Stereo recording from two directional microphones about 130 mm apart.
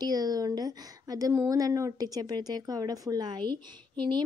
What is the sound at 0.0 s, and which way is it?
A woman's voice, 30° right (ahead or behind).